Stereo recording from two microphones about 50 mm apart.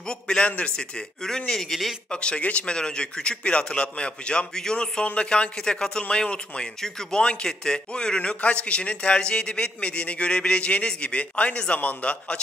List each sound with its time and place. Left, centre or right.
0.0 s a man's voice: centre
0.5 s a man's voice: left
0.7 s a man's voice: centre
2.0 s a man's voice: left